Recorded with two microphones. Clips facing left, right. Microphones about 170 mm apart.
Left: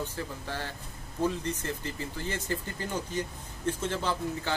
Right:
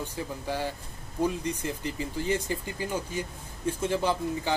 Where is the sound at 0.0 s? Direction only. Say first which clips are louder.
Right 2 dB; 15° right (ahead or behind).